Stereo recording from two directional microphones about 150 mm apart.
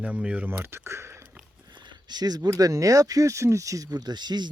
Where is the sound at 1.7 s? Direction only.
30° right (ahead or behind).